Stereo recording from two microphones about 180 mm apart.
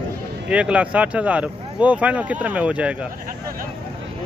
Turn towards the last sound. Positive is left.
turn(degrees=-5)  # may be behind; listen again after turning